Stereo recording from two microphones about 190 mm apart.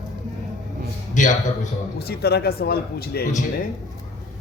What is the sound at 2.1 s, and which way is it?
Speech, 55° left (ahead or behind).